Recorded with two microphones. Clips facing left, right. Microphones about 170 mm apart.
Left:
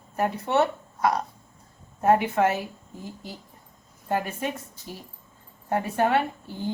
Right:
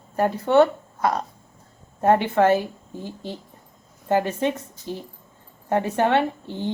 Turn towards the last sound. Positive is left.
turn(degrees=-25)  # may be behind; listen again after turning